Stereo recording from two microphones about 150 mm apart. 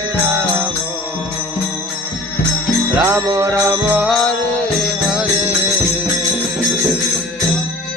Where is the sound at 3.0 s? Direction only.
25° right (ahead or behind); by 5.5 s 5° right (ahead or behind).